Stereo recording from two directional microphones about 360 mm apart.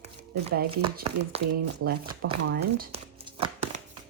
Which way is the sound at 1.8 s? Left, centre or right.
Right.